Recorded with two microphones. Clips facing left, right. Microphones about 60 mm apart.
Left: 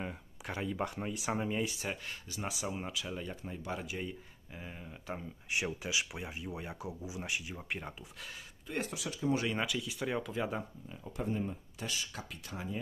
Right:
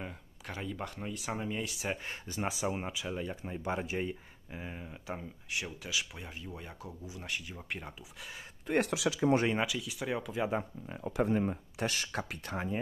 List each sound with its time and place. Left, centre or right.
0.0 s speech: centre
2.0 s speech: right; by 3.5 s centre
3.6 s speech: right; by 5.2 s centre
5.5 s speech: centre
8.6 s speech: right
9.6 s speech: centre
10.9 s speech: right